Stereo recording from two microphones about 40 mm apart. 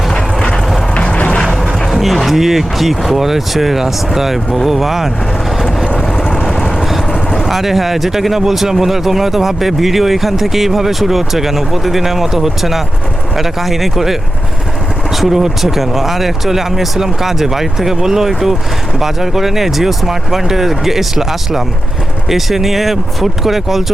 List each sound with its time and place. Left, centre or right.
0.1 s vehicle: centre
1.1 s music: left
1.4 s music: centre
1.9 s a sound: centre
2.2 s speech: centre
7.1 s vehicle: centre
7.4 s speech: centre